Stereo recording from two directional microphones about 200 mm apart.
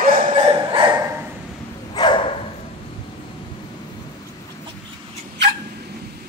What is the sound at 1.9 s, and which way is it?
Dog, 25° left (ahead or behind).